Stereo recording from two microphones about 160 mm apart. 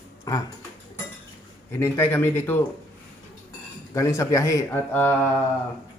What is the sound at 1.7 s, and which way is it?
Speech, 15° left (ahead or behind).